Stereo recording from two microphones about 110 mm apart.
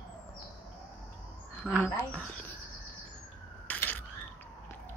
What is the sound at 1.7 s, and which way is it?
Speech, 10° left (ahead or behind).